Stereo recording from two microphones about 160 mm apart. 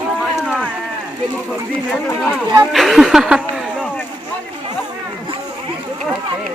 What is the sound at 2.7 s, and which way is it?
Speech, centre (ahead or behind).